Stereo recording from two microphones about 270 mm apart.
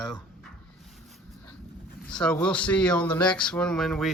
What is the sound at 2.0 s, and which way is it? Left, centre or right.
Speech, centre.